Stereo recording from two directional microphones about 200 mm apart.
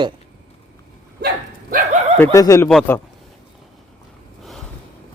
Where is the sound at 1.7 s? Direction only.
35° right (ahead or behind).